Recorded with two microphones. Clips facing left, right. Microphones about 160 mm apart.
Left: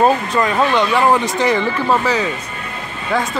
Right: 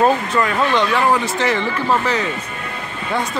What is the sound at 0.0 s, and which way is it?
Speech, 20° left (ahead or behind).